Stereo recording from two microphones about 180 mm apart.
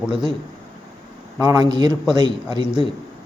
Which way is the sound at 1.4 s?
20° right (ahead or behind).